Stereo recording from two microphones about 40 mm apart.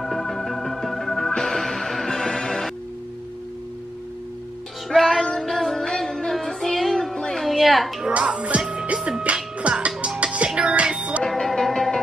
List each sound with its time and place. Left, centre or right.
0.0 s organ: centre
1.3 s music: centre
4.8 s music: centre
8.2 s speech: right
8.9 s music: right
11.2 s music: centre